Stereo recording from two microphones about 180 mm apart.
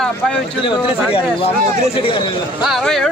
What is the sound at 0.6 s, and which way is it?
Speech, 30° left (ahead or behind).